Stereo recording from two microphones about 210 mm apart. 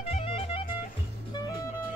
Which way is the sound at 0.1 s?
25° left (ahead or behind).